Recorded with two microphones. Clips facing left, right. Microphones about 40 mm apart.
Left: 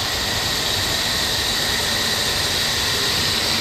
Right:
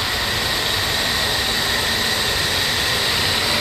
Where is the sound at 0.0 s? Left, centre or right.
Centre.